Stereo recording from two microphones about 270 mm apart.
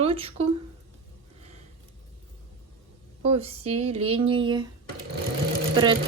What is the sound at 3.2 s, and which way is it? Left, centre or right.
Speech, right.